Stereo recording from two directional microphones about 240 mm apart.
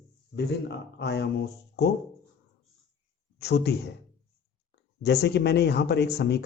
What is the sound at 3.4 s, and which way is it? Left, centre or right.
Speech, left.